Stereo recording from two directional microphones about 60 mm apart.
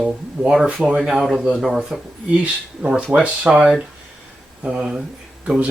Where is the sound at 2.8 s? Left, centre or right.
Centre.